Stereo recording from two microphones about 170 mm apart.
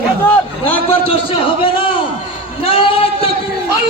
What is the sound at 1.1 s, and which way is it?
Speech, 30° left (ahead or behind).